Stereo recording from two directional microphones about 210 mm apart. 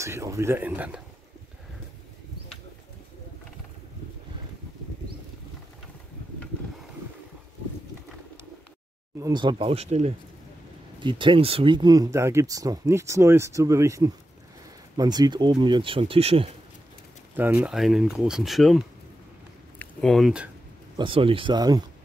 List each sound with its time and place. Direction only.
0.0 s speech: 15° right (ahead or behind)
9.2 s speech: 20° right (ahead or behind)
17.4 s speech: 10° right (ahead or behind)
21.0 s speech: 25° right (ahead or behind)